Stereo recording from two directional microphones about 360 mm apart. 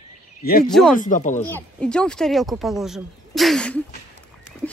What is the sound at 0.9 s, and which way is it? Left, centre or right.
Speech, left.